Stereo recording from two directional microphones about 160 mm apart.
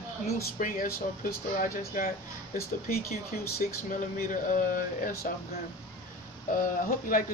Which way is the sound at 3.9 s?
55° left (ahead or behind).